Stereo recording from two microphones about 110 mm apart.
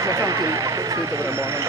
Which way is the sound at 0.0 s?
30° right (ahead or behind).